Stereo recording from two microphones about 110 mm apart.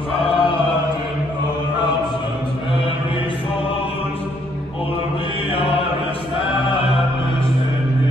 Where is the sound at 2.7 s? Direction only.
55° left (ahead or behind).